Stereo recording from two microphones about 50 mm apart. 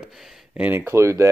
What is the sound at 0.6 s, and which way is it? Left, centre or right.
Speech, right.